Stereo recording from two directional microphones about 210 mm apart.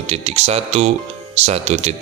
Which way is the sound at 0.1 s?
30° right (ahead or behind).